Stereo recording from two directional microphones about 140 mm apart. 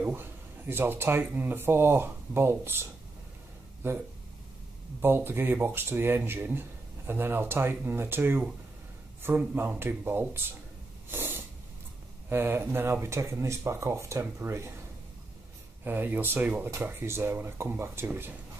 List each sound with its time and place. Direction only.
0.0 s speech: 15° right (ahead or behind)
5.0 s speech: 15° right (ahead or behind)
11.1 s snort: 15° right (ahead or behind)
12.3 s speech: 15° right (ahead or behind)
15.8 s speech: 15° right (ahead or behind)